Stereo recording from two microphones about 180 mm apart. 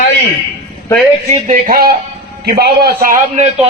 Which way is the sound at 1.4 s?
50° right (ahead or behind).